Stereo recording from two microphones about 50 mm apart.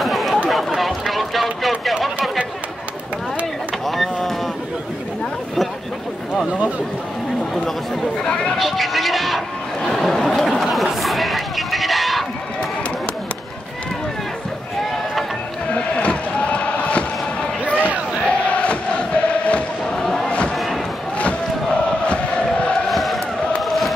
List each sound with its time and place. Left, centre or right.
0.0 s chatter: centre
0.5 s run: centre
3.8 s vehicle: centre
8.2 s speech: centre
8.5 s music: centre
9.8 s chatter: centre
15.7 s a sound: left
18.2 s chant: left
20.0 s a sound: centre
20.2 s a sound: left
20.5 s music: centre
21.2 s chant: left
22.8 s chant: centre